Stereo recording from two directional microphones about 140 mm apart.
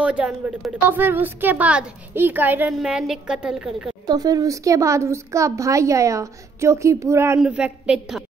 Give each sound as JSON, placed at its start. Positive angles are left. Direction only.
{"t": 0.0, "sound": "a woman's voice", "side_deg": -10}
{"t": 4.0, "sound": "speech", "side_deg": -30}
{"t": 7.3, "sound": "a woman's voice", "side_deg": -10}